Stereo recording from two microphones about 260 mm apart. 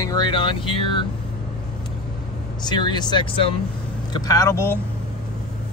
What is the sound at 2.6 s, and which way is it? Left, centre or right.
Speech, centre.